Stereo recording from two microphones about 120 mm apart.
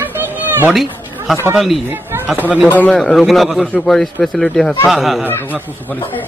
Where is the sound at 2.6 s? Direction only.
15° left (ahead or behind).